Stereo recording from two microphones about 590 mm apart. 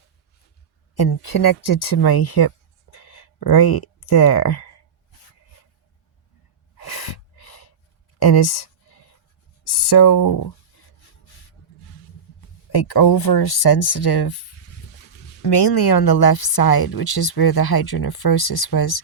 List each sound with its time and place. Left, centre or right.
0.9 s a woman's voice: left
2.9 s a sound: left
6.7 s gasp: left
8.2 s speech: left
12.7 s a woman's voice: left
15.4 s a woman's voice: left